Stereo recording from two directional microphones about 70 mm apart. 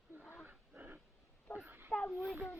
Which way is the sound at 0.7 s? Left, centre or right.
Right.